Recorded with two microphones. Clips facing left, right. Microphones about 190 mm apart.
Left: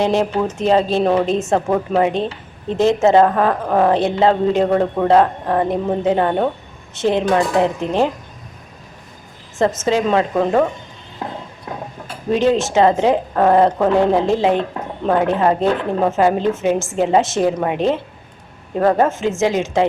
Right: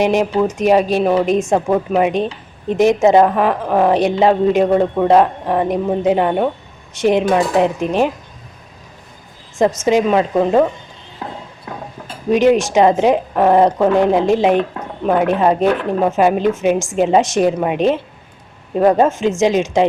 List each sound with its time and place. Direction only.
0.0 s speech: 15° right (ahead or behind)
9.6 s speech: 15° right (ahead or behind)
12.0 s speech: 20° right (ahead or behind)